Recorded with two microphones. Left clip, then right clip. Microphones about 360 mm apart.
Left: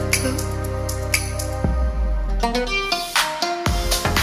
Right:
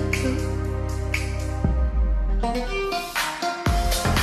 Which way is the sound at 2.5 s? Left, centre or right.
Left.